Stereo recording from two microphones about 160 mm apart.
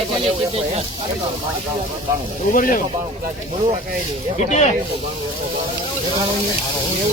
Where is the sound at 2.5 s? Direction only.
60° left (ahead or behind).